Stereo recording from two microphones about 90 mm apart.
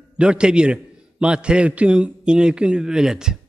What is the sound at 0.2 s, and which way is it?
A man's voice, 10° right (ahead or behind).